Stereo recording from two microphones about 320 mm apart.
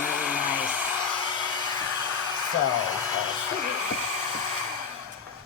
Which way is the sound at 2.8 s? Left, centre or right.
Left.